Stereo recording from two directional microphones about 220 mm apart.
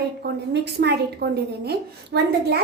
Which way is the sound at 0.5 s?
50° right (ahead or behind).